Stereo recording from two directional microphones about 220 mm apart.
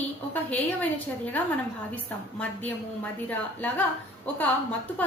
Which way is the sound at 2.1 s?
5° left (ahead or behind).